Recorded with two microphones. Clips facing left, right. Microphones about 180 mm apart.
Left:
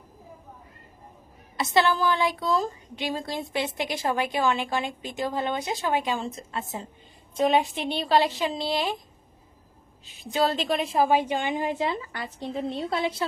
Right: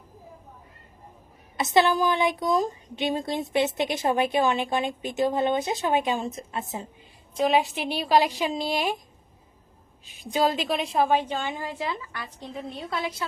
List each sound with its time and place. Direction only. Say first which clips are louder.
1.5 s a woman's voice: right 2 dB; 20° right (ahead or behind)
7.3 s a woman's voice: even; centre (ahead or behind); by 9.0 s 15° right (ahead or behind)
10.1 s a woman's voice: right 1 dB; 15° right (ahead or behind); by 13.2 s 30° left (ahead or behind)